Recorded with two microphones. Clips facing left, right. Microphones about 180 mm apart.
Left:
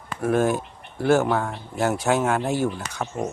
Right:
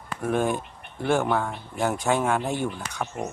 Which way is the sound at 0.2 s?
5° left (ahead or behind).